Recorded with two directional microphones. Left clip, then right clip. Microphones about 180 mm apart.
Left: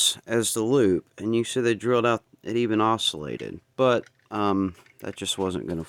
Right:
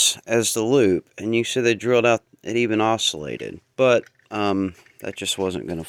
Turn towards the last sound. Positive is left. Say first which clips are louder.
# right 3 dB
turn(degrees=10)  # may be behind; listen again after turning